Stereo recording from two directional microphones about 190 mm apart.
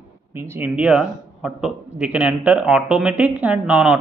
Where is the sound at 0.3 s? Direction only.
10° right (ahead or behind).